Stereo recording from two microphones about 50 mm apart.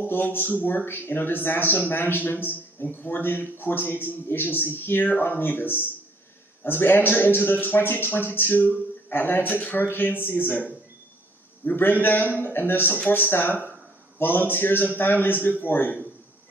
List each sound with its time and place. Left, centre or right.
0.0 s speech: left